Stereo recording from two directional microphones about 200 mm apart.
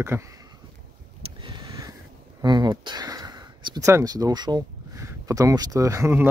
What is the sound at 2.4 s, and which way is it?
Speech, 20° right (ahead or behind).